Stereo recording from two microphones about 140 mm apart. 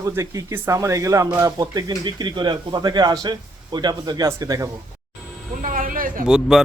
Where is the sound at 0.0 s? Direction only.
20° right (ahead or behind).